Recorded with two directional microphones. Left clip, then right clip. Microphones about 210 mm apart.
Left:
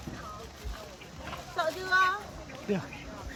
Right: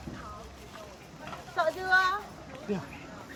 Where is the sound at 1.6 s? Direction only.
15° right (ahead or behind).